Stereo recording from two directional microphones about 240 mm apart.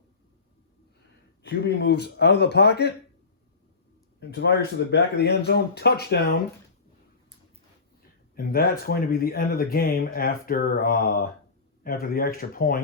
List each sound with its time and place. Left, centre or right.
1.4 s speech: left
4.2 s speech: left
8.4 s speech: left